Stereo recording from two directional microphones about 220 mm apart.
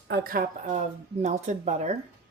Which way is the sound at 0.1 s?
40° right (ahead or behind).